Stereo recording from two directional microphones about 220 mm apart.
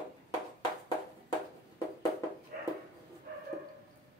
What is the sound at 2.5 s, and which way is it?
Dog, 40° right (ahead or behind).